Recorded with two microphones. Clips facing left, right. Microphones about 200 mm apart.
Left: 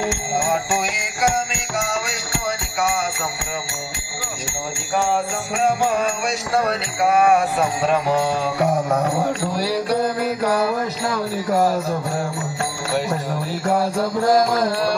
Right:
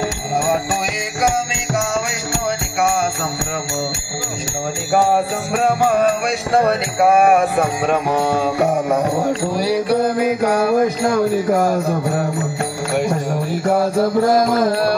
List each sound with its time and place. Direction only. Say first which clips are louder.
4.9 s jingle bell: right 5 dB; 40° right (ahead or behind)
5.5 s music: right 3 dB; 55° right (ahead or behind)
9.5 s mantra: right 4 dB; 15° right (ahead or behind)
10.6 s music: right 6 dB; 50° right (ahead or behind)
14.5 s music: right 4 dB; 50° right (ahead or behind)